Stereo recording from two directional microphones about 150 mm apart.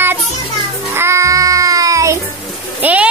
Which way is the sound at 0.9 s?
20° right (ahead or behind).